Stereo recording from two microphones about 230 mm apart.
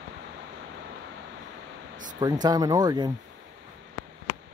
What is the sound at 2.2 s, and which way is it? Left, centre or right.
Speech, centre.